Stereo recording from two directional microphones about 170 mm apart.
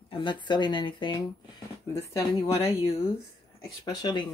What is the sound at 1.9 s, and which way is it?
Speech, 20° left (ahead or behind).